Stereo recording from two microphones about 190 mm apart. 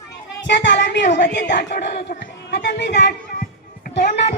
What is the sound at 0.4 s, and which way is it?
Speech, 70° left (ahead or behind).